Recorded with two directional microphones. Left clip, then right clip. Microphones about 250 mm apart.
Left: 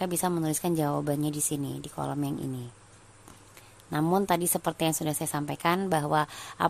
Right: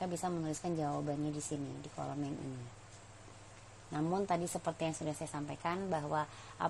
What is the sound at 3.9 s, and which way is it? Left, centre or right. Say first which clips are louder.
A woman's voice: left 9 dB; left.